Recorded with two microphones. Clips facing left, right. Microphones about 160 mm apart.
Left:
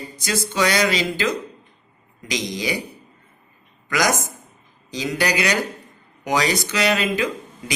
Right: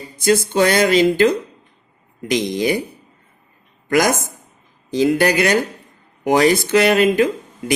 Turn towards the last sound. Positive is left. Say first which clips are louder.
# right 7 dB
turn(degrees=-50)  # may be behind; listen again after turning